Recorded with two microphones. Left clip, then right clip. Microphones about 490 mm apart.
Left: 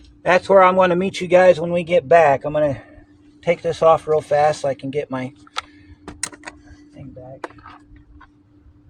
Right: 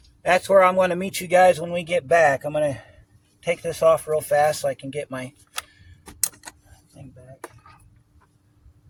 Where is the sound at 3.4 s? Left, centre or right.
Right.